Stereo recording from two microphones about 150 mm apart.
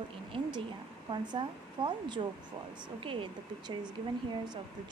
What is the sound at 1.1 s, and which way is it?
Speech, 35° right (ahead or behind).